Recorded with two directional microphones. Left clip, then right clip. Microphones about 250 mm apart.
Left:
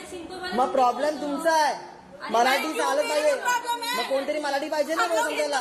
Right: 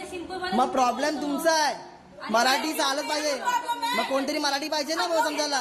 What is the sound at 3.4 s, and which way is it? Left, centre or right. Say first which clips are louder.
Speech: left 1 dB; centre.